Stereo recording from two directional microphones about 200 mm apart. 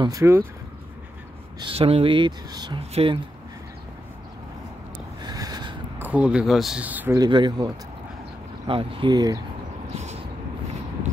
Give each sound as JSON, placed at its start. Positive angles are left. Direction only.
{"t": 0.0, "sound": "speech", "side_deg": -15}
{"t": 1.6, "sound": "speech", "side_deg": -30}
{"t": 5.2, "sound": "a sound", "side_deg": -20}
{"t": 5.9, "sound": "speech", "side_deg": -10}
{"t": 7.2, "sound": "speech", "side_deg": -20}